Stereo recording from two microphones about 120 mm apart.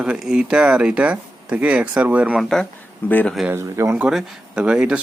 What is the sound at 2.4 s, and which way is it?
Speech, 5° left (ahead or behind).